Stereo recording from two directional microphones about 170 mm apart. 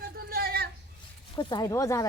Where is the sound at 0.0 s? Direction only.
65° right (ahead or behind).